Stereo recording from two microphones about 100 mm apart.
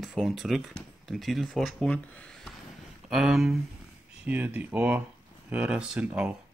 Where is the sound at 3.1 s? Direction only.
5° right (ahead or behind).